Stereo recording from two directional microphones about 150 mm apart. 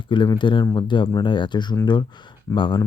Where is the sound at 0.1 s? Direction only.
30° left (ahead or behind).